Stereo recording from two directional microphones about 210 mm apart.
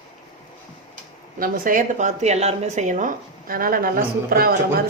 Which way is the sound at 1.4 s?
45° right (ahead or behind).